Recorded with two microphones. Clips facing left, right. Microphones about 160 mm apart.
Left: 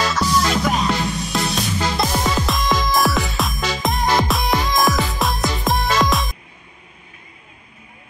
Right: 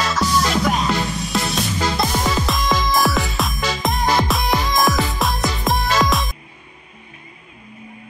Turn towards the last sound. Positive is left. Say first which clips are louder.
# even
turn(degrees=0)  # may be behind; listen again after turning